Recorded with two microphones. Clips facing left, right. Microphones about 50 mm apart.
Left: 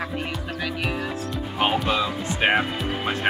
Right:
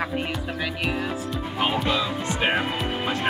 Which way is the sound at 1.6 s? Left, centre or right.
Left.